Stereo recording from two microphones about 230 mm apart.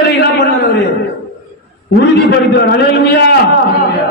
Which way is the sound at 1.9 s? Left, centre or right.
Left.